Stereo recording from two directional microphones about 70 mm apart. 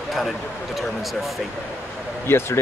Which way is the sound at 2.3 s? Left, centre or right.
Left.